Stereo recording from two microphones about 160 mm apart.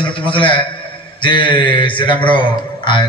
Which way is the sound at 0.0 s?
30° left (ahead or behind).